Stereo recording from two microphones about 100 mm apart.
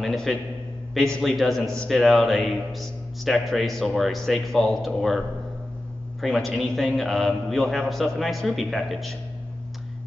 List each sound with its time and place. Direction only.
0.0 s a man's voice: 5° left (ahead or behind)
6.2 s a man's voice: 5° left (ahead or behind)